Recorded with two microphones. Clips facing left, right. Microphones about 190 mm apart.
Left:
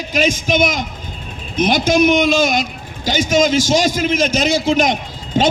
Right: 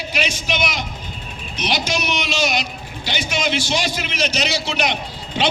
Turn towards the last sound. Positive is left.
turn(degrees=45)  # may be behind; listen again after turning